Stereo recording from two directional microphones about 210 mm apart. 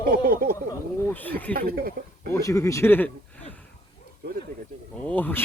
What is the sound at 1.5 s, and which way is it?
Speech, 45° right (ahead or behind).